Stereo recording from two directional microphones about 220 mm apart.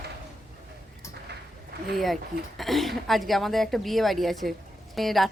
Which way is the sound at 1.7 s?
45° right (ahead or behind).